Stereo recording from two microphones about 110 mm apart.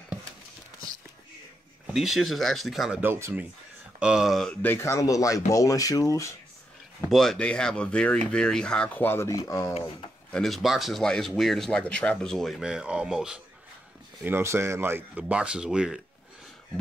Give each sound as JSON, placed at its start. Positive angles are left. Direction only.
{"t": 1.9, "sound": "speech", "side_deg": -5}
{"t": 3.0, "sound": "speech", "side_deg": -20}
{"t": 4.0, "sound": "speech", "side_deg": -5}
{"t": 4.6, "sound": "speech", "side_deg": 20}
{"t": 7.1, "sound": "speech", "side_deg": 5}
{"t": 10.3, "sound": "speech", "side_deg": 0}
{"t": 14.2, "sound": "speech", "side_deg": -20}